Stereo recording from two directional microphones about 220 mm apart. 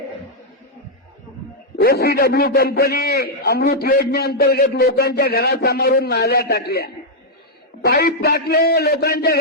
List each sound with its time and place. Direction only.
1.8 s a man's voice: 45° left (ahead or behind)